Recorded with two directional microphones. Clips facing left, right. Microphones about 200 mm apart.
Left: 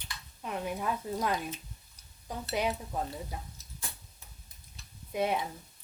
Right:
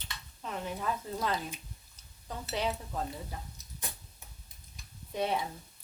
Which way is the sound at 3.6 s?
20° right (ahead or behind).